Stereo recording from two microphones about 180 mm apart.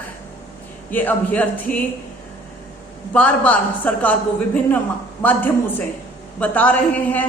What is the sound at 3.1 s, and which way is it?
A woman's voice, 5° left (ahead or behind).